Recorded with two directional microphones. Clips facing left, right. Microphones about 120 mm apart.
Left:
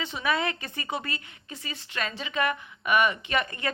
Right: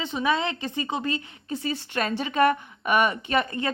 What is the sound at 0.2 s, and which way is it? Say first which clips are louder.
Speech: right 3 dB; 25° right (ahead or behind).